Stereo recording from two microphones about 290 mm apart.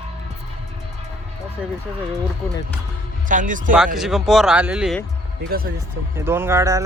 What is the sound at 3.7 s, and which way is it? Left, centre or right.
Speech, centre.